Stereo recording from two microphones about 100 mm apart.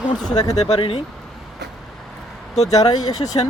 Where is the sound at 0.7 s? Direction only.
70° left (ahead or behind).